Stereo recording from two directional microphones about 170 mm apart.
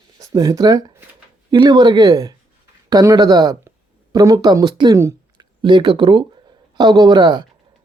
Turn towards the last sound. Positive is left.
turn(degrees=-25)  # may be behind; listen again after turning